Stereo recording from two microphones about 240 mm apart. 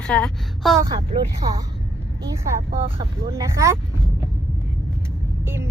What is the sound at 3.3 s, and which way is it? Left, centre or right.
Speech, centre.